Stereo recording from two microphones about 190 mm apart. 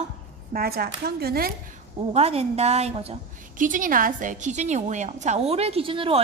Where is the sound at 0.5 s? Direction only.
55° right (ahead or behind).